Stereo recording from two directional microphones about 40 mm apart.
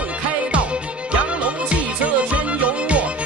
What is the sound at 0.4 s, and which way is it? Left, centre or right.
Music, right.